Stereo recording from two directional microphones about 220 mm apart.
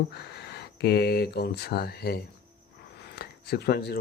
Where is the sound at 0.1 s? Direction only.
50° left (ahead or behind).